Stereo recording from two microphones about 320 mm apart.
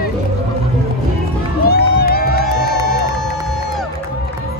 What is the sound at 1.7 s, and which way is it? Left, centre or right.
Crowd, left.